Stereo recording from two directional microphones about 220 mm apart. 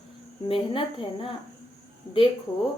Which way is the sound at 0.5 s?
25° left (ahead or behind).